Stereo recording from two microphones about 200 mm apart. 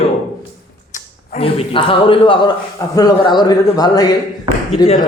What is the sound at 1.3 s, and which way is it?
A man's voice, 25° left (ahead or behind).